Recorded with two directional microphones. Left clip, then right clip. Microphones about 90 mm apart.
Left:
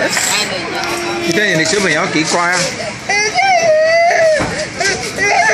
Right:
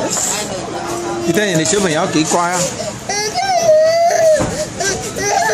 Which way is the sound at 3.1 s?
60° right (ahead or behind).